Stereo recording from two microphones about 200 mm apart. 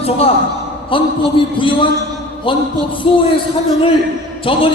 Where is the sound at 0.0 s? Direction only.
30° left (ahead or behind).